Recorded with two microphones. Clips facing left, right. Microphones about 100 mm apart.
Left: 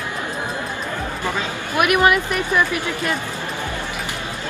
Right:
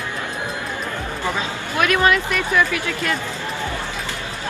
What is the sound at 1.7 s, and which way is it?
Speech, 15° left (ahead or behind).